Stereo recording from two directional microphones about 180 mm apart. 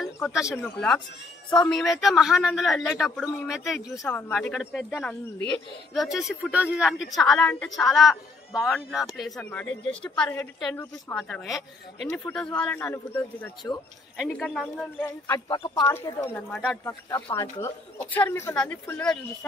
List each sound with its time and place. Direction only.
0.0 s speech: centre (ahead or behind)
0.6 s a man's voice: 5° left (ahead or behind)
11.1 s a man's voice: centre (ahead or behind)
15.0 s speech: 20° left (ahead or behind)
15.9 s speech: 15° left (ahead or behind)